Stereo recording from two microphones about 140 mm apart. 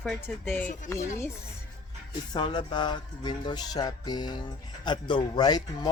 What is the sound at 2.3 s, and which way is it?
Music, 35° left (ahead or behind).